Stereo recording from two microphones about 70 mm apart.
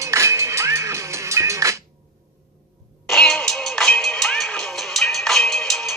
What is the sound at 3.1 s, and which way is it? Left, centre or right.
Music, centre.